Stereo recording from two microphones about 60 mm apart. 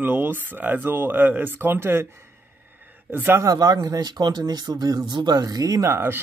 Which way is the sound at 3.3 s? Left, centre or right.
Right.